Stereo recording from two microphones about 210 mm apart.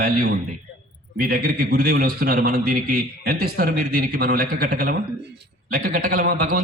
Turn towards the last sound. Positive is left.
turn(degrees=-45)  # may be behind; listen again after turning